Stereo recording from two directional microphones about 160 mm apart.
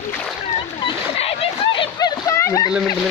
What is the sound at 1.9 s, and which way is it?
Splash, 20° left (ahead or behind).